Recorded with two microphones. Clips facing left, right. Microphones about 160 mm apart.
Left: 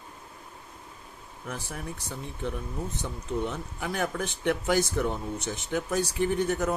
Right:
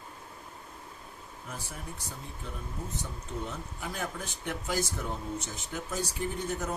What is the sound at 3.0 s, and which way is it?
Speech, 70° left (ahead or behind).